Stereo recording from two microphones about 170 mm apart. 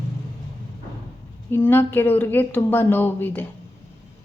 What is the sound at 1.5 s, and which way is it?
A woman's voice, 10° left (ahead or behind).